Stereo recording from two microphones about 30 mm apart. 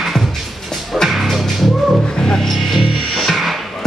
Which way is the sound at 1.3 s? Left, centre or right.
Centre.